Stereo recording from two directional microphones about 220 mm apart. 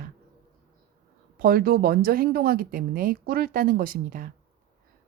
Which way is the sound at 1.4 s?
40° right (ahead or behind).